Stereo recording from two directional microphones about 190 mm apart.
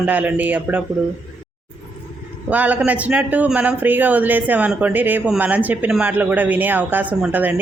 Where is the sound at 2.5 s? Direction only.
10° right (ahead or behind).